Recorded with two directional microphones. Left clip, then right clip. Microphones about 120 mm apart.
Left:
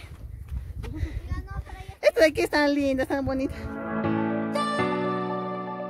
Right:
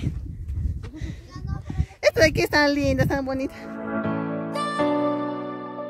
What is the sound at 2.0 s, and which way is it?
Speech, 65° right (ahead or behind).